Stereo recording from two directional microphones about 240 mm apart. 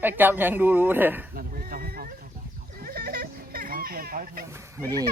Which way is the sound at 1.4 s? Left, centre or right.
Right.